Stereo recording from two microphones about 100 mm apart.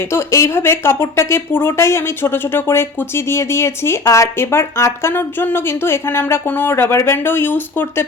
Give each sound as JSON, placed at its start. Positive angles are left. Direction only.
{"t": 0.1, "sound": "speech", "side_deg": 25}